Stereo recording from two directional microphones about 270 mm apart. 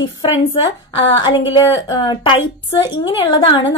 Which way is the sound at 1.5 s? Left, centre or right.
Centre.